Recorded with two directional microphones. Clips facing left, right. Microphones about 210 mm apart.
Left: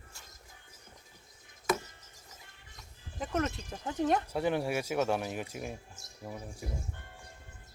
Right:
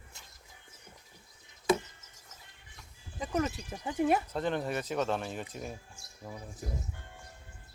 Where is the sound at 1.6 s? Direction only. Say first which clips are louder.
Right 4 dB; 20° right (ahead or behind).